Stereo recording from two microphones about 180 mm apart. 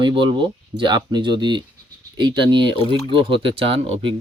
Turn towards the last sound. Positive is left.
turn(degrees=-30)  # may be behind; listen again after turning